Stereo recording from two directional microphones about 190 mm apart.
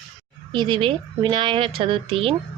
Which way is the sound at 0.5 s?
25° right (ahead or behind).